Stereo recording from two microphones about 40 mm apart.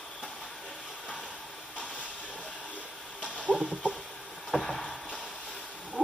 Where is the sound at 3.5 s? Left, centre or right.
Left.